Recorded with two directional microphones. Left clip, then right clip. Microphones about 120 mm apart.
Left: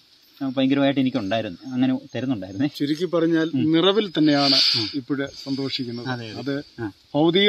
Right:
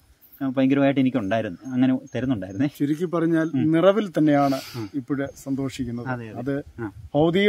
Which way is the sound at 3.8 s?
90° right.